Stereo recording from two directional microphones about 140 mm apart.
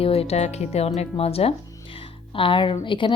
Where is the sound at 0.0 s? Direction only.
45° left (ahead or behind).